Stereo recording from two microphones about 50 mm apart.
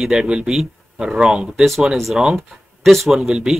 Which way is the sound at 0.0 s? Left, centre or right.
Centre.